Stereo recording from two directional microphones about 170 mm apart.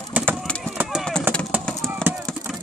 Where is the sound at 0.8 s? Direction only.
5° right (ahead or behind).